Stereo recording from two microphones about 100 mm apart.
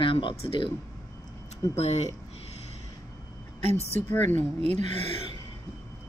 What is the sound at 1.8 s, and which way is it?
Speech, 90° left.